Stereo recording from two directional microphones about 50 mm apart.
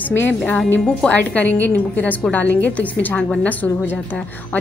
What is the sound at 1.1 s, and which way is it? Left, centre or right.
A woman's voice, left.